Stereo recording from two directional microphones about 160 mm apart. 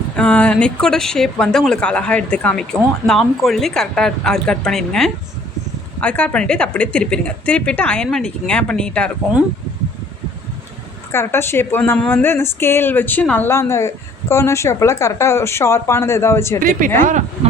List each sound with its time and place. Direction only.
0.2 s a woman's voice: 10° left (ahead or behind)
11.1 s a woman's voice: 15° left (ahead or behind)
17.0 s speech: 50° right (ahead or behind)